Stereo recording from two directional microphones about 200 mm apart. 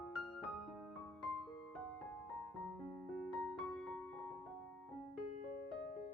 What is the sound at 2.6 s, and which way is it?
Music, centre (ahead or behind).